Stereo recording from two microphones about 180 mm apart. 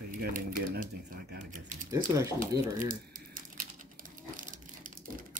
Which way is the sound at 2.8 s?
50° right (ahead or behind).